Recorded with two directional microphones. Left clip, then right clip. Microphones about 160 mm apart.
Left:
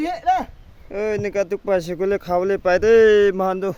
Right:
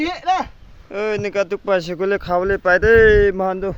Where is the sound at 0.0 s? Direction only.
35° left (ahead or behind).